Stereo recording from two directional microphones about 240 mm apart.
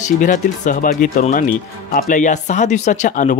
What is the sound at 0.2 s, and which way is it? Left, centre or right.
Speech, left.